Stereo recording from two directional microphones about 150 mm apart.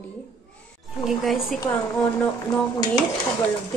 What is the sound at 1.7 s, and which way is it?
Speech, 15° left (ahead or behind).